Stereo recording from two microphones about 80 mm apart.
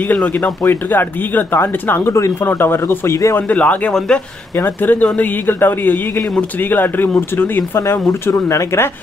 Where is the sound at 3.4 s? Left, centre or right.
Centre.